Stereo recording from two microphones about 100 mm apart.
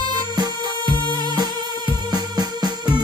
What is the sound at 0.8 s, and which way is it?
Music, 55° left (ahead or behind).